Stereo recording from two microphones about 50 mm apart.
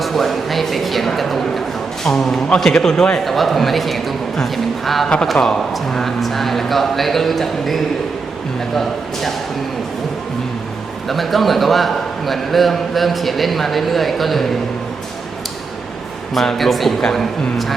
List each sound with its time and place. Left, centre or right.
0.0 s a man's voice: centre
3.2 s a man's voice: centre
5.0 s a man's voice: centre
11.1 s a man's voice: centre
16.3 s a man's voice: centre